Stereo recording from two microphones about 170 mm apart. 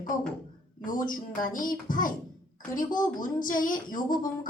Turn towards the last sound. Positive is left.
turn(degrees=50)  # may be behind; listen again after turning